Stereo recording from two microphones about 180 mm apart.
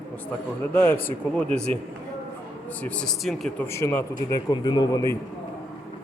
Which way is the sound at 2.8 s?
5° left (ahead or behind).